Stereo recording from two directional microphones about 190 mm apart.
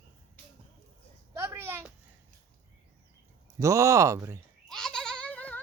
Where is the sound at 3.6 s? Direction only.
15° right (ahead or behind).